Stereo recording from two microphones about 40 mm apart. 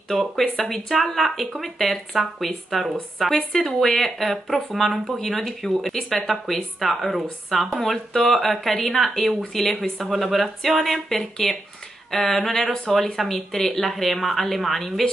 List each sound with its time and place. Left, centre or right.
0.1 s speech: centre
12.5 s speech: left
12.9 s speech: centre